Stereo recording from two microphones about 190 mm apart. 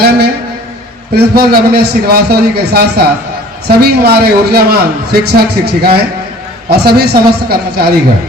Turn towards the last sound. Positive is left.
turn(degrees=-55)  # may be behind; listen again after turning